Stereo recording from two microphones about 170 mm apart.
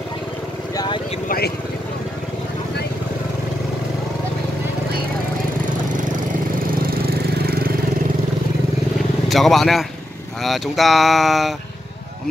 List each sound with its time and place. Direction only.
0.7 s vehicle: 25° left (ahead or behind)
6.7 s engine: 60° right (ahead or behind)
9.3 s speech: centre (ahead or behind)